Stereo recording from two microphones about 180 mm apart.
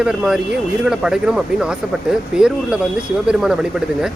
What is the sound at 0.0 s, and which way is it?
A man's voice, 5° right (ahead or behind).